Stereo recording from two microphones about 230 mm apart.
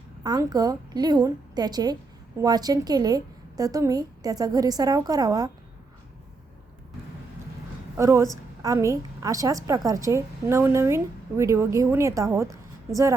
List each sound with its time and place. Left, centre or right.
0.2 s a woman's voice: centre
7.9 s a woman's voice: centre